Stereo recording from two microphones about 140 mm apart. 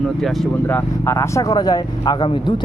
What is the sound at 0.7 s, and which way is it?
Speech, 20° left (ahead or behind).